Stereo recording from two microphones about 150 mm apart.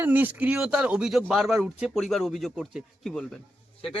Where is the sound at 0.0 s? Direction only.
10° right (ahead or behind).